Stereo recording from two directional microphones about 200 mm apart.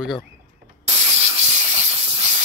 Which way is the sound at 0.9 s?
30° right (ahead or behind).